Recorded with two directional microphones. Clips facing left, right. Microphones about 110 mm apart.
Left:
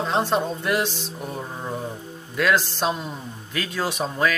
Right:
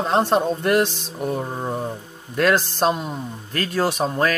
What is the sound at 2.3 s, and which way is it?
Speech, 45° right (ahead or behind).